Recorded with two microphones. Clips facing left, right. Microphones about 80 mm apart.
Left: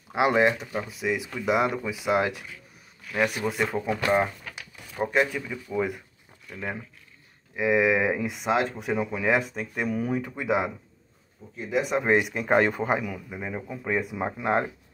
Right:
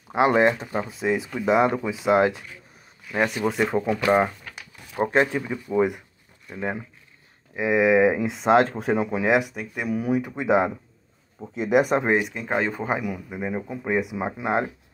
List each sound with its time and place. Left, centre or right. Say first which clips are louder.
0.1 s speech: right 3 dB; right
4.9 s speech: right 3 dB; right
8.4 s speech: right 10 dB; right
8.9 s speech: right 3 dB; right
11.5 s speech: right 7 dB; right
12.2 s speech: left 3 dB; centre
12.9 s speech: right 1 dB; centre